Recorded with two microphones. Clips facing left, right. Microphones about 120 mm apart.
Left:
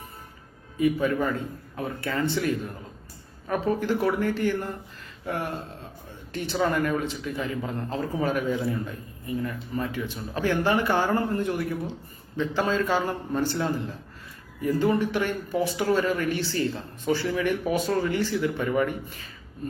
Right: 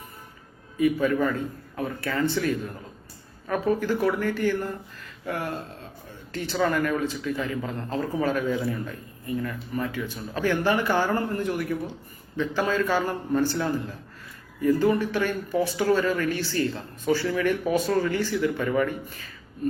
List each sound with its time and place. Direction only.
0.8 s a man's voice: 25° left (ahead or behind)